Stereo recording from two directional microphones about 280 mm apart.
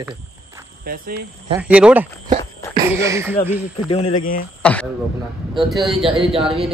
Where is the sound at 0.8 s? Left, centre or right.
Right.